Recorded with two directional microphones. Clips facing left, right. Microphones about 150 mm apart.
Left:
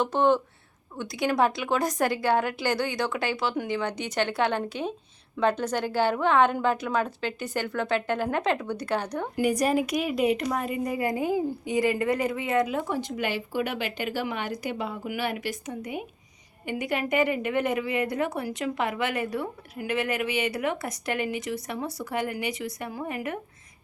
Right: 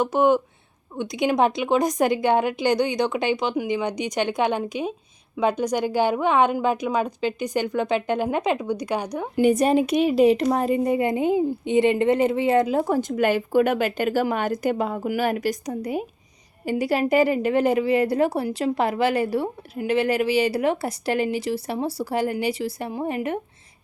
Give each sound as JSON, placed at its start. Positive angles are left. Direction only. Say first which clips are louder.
{"t": 0.0, "sound": "a woman's voice", "louder": "right 4 dB", "side_deg": -10}
{"t": 9.4, "sound": "a woman's voice", "louder": "right 6 dB", "side_deg": -25}